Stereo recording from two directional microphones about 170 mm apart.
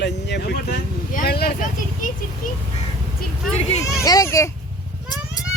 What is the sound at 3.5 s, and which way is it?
Speech, 40° left (ahead or behind).